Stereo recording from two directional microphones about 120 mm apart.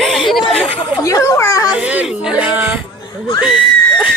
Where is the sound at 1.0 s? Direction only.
30° left (ahead or behind).